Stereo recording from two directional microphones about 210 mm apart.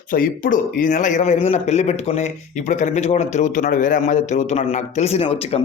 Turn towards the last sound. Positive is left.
turn(degrees=30)  # may be behind; listen again after turning